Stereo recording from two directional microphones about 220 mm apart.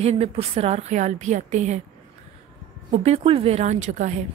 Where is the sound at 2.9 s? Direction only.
30° right (ahead or behind).